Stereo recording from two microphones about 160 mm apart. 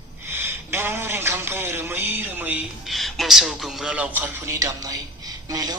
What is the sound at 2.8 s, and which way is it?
A man's voice, centre (ahead or behind).